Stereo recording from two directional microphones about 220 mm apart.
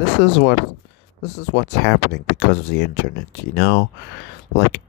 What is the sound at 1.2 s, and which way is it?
Speech, 50° left (ahead or behind).